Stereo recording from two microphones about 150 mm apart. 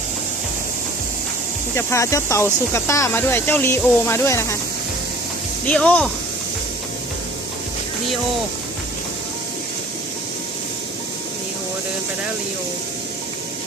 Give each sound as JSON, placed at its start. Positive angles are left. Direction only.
{"t": 1.7, "sound": "speech", "side_deg": 20}
{"t": 5.6, "sound": "speech", "side_deg": 10}